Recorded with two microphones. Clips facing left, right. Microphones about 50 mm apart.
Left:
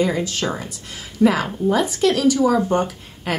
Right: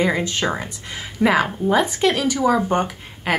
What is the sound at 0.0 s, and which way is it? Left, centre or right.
Speech, right.